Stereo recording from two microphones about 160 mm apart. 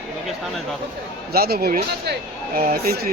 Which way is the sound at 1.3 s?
75° right (ahead or behind).